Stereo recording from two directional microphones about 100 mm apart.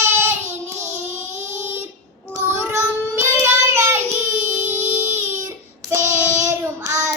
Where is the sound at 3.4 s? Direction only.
25° right (ahead or behind).